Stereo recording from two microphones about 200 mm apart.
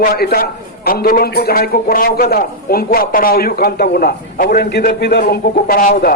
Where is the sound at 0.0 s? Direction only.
50° left (ahead or behind).